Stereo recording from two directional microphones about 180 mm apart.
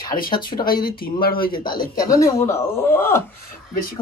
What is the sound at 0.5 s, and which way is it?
Speech, 30° left (ahead or behind).